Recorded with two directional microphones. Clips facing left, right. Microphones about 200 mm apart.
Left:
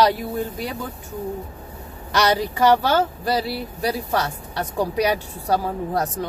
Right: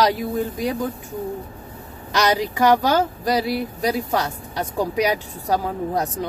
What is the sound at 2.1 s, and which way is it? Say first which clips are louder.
Speech: even; 15° right (ahead or behind).